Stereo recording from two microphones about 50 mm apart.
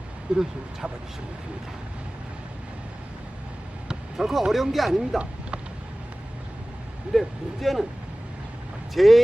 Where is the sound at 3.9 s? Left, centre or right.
Centre.